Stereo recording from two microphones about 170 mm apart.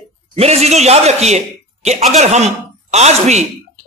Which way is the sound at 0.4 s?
40° right (ahead or behind).